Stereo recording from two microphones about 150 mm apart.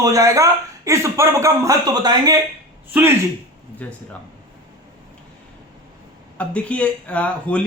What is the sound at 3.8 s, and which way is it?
Speech, 10° left (ahead or behind).